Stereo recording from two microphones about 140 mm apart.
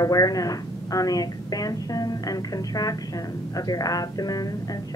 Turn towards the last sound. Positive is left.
turn(degrees=25)  # may be behind; listen again after turning